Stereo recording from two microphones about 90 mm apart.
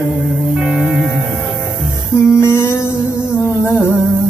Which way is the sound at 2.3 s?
25° left (ahead or behind).